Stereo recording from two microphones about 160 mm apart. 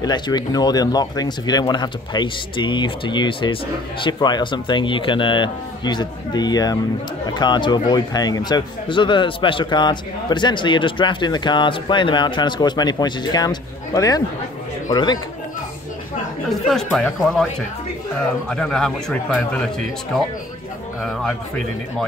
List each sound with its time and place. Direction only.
0.0 s a man's voice: 25° left (ahead or behind)
16.4 s speech: centre (ahead or behind)
18.5 s speech: 5° left (ahead or behind)